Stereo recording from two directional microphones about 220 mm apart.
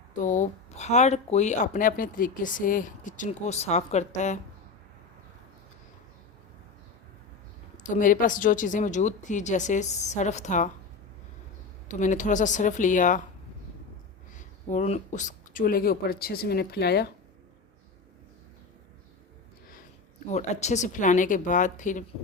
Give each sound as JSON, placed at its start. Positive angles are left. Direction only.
{"t": 0.2, "sound": "speech", "side_deg": 35}
{"t": 7.9, "sound": "speech", "side_deg": 35}
{"t": 11.9, "sound": "speech", "side_deg": 35}
{"t": 14.3, "sound": "speech", "side_deg": 35}
{"t": 20.2, "sound": "speech", "side_deg": 30}